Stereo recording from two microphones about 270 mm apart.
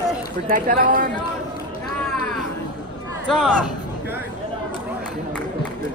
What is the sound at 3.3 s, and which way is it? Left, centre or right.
Speech, centre.